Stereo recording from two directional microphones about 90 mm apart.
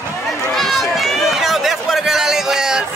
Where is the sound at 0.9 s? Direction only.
Centre (ahead or behind).